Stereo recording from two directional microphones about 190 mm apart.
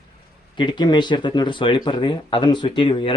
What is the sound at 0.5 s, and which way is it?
Speech, 25° left (ahead or behind).